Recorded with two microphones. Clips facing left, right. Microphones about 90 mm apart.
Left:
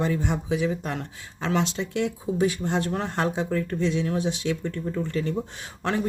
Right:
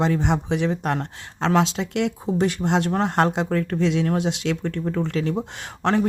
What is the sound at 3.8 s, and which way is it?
Speech, 85° right.